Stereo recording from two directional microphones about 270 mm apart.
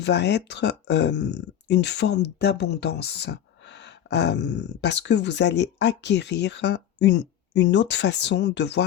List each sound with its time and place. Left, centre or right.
0.0 s speech: left